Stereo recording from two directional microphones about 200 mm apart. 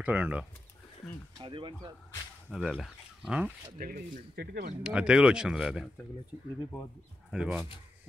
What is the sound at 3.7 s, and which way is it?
Speech, 45° right (ahead or behind).